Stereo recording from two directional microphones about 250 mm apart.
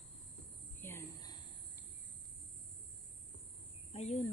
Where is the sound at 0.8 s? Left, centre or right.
Centre.